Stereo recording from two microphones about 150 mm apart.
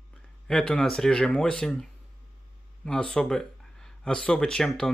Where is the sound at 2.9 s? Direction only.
5° left (ahead or behind).